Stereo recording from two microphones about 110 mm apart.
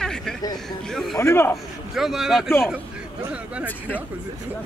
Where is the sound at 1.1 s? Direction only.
20° left (ahead or behind).